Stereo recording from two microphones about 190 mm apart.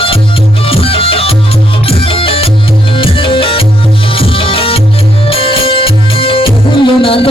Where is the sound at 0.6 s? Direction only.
30° left (ahead or behind).